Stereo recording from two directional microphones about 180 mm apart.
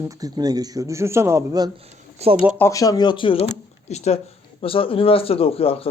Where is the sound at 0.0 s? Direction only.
20° right (ahead or behind).